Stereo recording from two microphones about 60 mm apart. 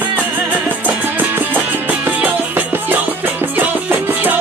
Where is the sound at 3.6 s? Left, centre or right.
Right.